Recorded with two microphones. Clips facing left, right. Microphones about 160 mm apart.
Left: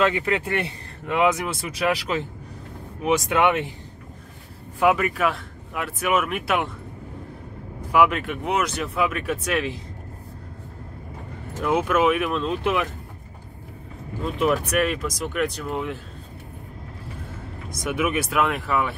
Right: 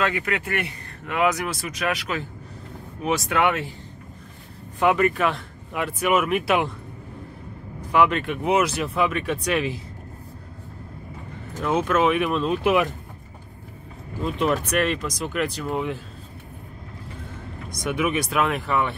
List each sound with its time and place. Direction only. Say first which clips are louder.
0.0 s speech: left 3 dB; 25° left (ahead or behind)
4.7 s speech: right 1 dB; 5° left (ahead or behind)
7.9 s speech: even; 5° left (ahead or behind)
11.6 s speech: even; 10° left (ahead or behind); by 12.8 s 5° right (ahead or behind)
14.4 s speech: left 1 dB; 5° left (ahead or behind)
17.6 s speech: even; 5° left (ahead or behind)